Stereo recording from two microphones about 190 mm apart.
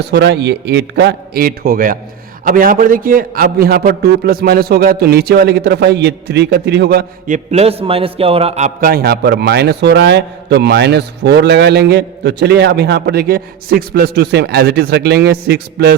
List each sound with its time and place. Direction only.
0.1 s a man's voice: 65° right (ahead or behind)
7.3 s a man's voice: 35° right (ahead or behind)
8.9 s a man's voice: 55° right (ahead or behind)